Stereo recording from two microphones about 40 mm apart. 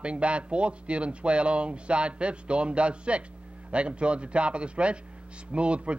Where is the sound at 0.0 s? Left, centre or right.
Right.